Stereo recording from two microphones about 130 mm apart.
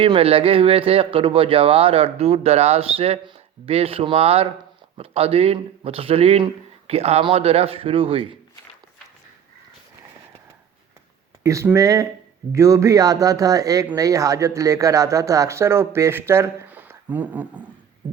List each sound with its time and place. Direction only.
0.0 s a man's voice: 45° right (ahead or behind)
11.4 s speech: 25° right (ahead or behind)